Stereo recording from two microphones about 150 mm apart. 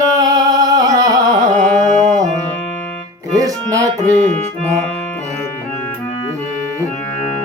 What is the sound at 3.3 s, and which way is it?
Music, 20° right (ahead or behind).